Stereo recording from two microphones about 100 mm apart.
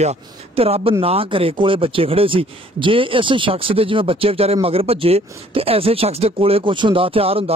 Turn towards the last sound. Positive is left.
turn(degrees=-70)  # may be behind; listen again after turning